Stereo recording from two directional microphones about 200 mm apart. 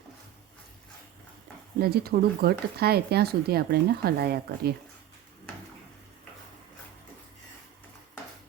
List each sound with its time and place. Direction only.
1.8 s speech: 50° right (ahead or behind)